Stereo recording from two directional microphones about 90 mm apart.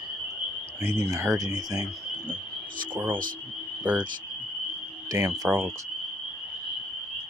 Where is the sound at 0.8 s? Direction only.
30° right (ahead or behind).